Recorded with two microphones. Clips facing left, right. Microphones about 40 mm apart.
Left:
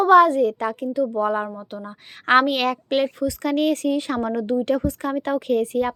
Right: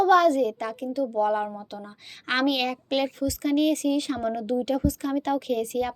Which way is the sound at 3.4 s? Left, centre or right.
Left.